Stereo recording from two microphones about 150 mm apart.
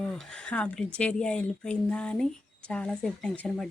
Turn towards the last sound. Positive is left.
turn(degrees=5)  # may be behind; listen again after turning